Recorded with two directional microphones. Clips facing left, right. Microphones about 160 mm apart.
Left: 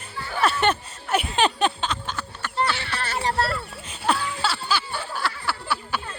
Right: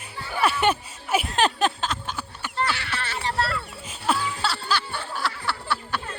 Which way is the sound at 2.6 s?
20° left (ahead or behind).